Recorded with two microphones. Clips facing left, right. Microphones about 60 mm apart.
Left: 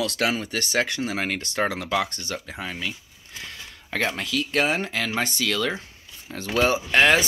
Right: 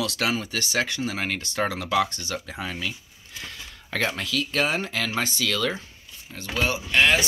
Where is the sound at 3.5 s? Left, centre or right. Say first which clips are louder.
Left 1 dB; left.